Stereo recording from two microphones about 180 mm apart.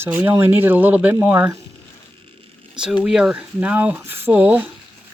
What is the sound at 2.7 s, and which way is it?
Speech, 5° right (ahead or behind).